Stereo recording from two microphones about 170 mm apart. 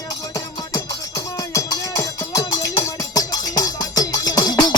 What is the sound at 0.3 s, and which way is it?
Music, 20° left (ahead or behind).